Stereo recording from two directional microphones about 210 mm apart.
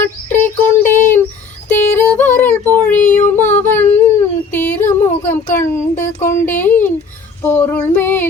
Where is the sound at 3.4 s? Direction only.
35° left (ahead or behind).